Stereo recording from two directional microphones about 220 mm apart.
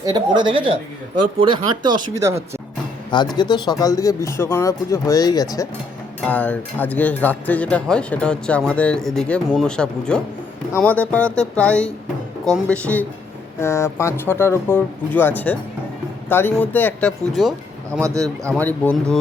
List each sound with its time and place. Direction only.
0.0 s speech: 20° right (ahead or behind)
3.3 s speech: 20° left (ahead or behind); by 17.5 s centre (ahead or behind)
17.9 s speech: 15° right (ahead or behind)
18.6 s speech: 5° left (ahead or behind)